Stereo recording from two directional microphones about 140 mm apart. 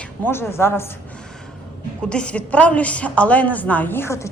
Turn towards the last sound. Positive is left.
turn(degrees=20)  # may be behind; listen again after turning